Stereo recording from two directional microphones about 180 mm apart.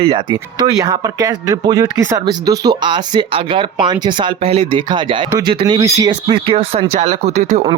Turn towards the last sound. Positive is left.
turn(degrees=-35)  # may be behind; listen again after turning